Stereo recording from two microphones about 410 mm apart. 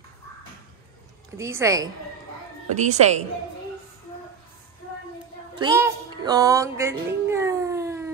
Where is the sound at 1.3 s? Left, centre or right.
Centre.